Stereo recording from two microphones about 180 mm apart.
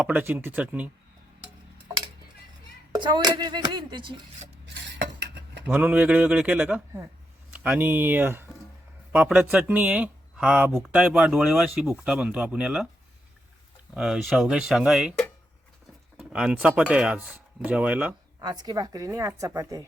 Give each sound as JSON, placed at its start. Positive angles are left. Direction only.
{"t": 0.0, "sound": "speech", "side_deg": -10}
{"t": 2.9, "sound": "a woman's voice", "side_deg": -25}
{"t": 4.6, "sound": "cutlery", "side_deg": -80}
{"t": 5.6, "sound": "speech", "side_deg": -10}
{"t": 13.9, "sound": "speech", "side_deg": -5}
{"t": 16.1, "sound": "speech", "side_deg": -5}
{"t": 18.3, "sound": "a woman's voice", "side_deg": -25}